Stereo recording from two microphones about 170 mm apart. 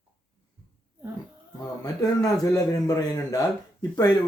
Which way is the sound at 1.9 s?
20° left (ahead or behind).